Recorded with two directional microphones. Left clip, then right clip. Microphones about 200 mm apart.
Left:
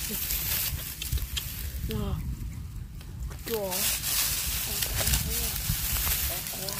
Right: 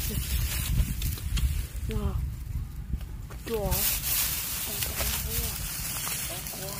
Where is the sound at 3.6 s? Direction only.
10° right (ahead or behind).